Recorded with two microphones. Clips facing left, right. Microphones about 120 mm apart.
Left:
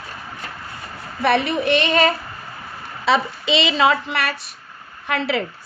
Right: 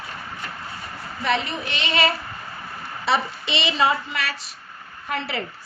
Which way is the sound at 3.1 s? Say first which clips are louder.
Left 4 dB; 90° left.